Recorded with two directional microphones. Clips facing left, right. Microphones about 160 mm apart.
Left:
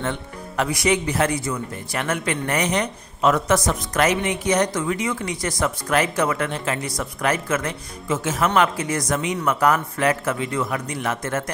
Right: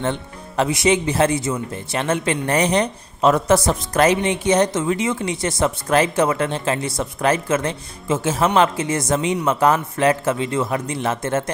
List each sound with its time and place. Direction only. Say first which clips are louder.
0.0 s speech: right 3 dB; 30° right (ahead or behind)